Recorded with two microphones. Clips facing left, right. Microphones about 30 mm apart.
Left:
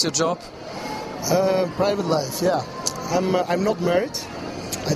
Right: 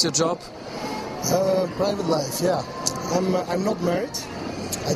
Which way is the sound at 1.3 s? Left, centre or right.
Left.